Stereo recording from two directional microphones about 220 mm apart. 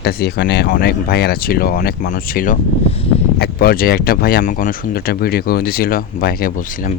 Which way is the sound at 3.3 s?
45° left (ahead or behind).